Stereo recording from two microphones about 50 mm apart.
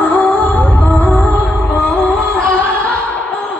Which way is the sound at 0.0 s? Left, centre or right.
Left.